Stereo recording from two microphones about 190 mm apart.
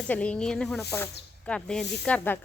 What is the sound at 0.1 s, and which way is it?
Speech, 5° left (ahead or behind).